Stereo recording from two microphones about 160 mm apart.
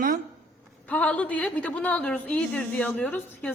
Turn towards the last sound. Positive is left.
turn(degrees=10)  # may be behind; listen again after turning